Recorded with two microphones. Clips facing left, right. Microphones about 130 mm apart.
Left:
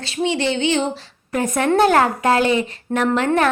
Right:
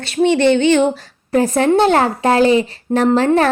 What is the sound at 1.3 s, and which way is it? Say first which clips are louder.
A woman's voice: right 5 dB; 30° right (ahead or behind).